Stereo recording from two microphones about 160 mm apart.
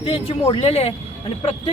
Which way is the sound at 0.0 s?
35° left (ahead or behind).